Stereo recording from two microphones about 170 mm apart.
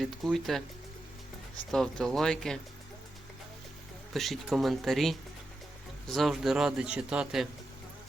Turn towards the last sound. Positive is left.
turn(degrees=-5)  # may be behind; listen again after turning